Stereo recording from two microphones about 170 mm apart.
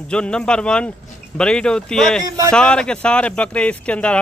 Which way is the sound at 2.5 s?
5° left (ahead or behind).